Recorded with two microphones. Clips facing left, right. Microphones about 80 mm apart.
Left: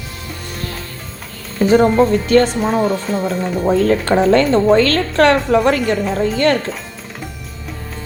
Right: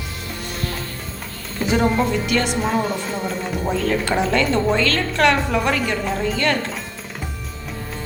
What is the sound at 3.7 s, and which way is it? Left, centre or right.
A woman's voice, left.